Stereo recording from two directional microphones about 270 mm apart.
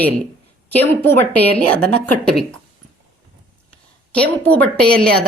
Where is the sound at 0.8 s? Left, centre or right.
Centre.